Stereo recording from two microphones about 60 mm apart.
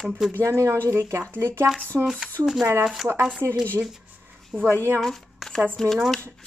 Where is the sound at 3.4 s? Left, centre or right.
Right.